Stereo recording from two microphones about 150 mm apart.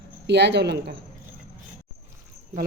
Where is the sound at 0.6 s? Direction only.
90° right.